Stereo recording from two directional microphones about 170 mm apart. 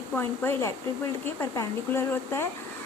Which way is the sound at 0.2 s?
15° left (ahead or behind).